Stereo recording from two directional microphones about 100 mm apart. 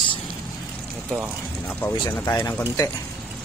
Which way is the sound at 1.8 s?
20° left (ahead or behind).